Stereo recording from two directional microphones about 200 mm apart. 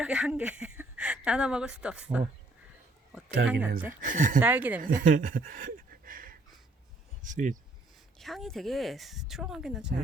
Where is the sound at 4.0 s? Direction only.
40° right (ahead or behind).